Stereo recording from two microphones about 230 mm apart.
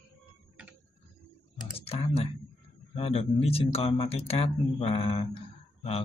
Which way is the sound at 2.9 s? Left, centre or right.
Left.